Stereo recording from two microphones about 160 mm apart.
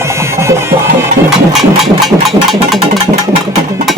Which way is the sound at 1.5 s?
Centre (ahead or behind).